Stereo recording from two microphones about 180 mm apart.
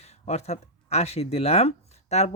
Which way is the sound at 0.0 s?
35° left (ahead or behind).